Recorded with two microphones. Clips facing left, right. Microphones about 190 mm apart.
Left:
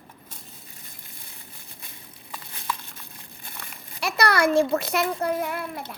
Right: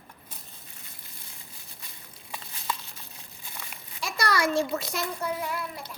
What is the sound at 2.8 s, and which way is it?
Crumpling, 55° left (ahead or behind).